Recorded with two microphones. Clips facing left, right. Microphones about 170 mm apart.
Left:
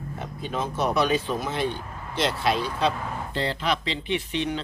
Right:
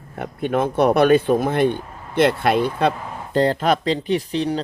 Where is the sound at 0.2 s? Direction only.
60° right (ahead or behind).